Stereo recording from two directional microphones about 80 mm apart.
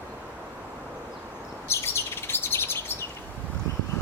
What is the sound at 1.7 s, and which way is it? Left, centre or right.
Chirp, left.